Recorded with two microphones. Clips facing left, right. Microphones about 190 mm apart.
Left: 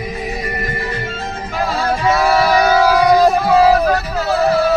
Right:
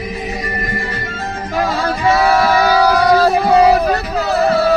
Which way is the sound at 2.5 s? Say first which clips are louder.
Even; 15° left (ahead or behind).